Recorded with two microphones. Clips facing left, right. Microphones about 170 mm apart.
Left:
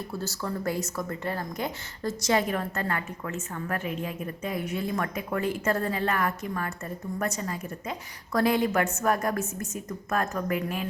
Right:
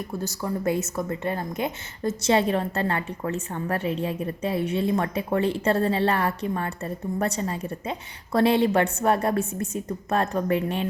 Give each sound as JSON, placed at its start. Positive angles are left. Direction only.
{"t": 0.1, "sound": "speech", "side_deg": -15}